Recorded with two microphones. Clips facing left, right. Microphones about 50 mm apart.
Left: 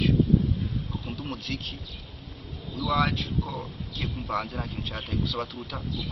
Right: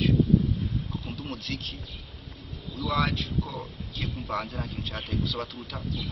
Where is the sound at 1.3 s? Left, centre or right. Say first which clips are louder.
Left 1 dB; centre.